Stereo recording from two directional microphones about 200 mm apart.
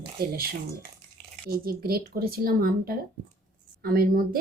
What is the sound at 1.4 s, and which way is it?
Speech, 50° right (ahead or behind).